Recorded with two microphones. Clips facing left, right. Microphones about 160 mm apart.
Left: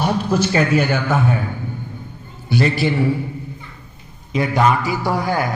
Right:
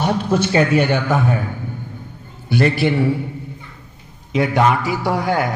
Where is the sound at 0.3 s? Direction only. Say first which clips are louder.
Right 2 dB; 30° right (ahead or behind).